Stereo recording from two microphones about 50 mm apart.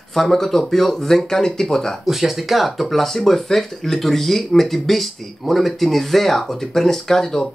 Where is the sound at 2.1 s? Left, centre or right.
Centre.